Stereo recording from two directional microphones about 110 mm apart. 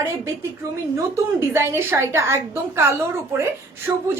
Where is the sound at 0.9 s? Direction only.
25° right (ahead or behind).